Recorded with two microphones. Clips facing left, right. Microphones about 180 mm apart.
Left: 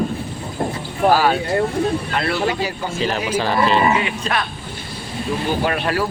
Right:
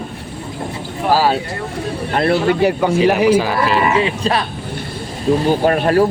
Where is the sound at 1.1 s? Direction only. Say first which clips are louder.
Right 6 dB; 35° right (ahead or behind).